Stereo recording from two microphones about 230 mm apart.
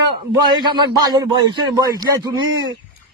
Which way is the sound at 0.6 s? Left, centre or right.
Centre.